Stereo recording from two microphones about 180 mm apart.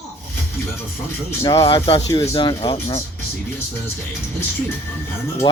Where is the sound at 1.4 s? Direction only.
20° left (ahead or behind).